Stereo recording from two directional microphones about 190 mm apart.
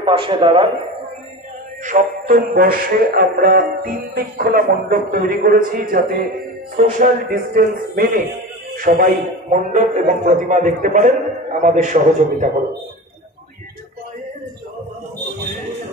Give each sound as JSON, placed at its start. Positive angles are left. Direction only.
{"t": 0.0, "sound": "a man's voice", "side_deg": -25}
{"t": 1.9, "sound": "a man's voice", "side_deg": -45}
{"t": 9.5, "sound": "a man's voice", "side_deg": -35}